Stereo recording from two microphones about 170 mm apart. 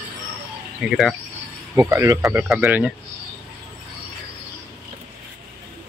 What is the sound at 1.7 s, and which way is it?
Speech, 15° right (ahead or behind).